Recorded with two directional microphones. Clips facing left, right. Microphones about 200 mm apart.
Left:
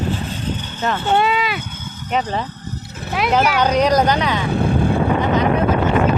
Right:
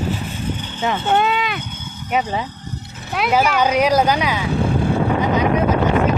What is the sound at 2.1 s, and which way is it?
Speech, 10° right (ahead or behind).